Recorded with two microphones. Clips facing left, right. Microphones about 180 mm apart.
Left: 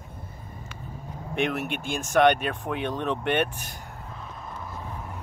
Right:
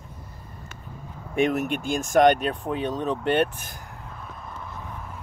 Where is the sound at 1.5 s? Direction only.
45° right (ahead or behind).